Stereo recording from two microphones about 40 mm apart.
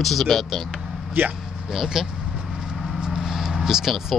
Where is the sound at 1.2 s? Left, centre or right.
Right.